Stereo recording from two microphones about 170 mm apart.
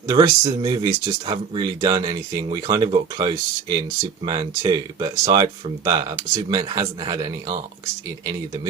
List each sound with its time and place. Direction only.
0.1 s speech: 25° right (ahead or behind)